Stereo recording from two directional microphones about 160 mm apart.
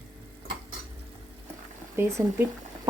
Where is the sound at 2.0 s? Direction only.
15° right (ahead or behind).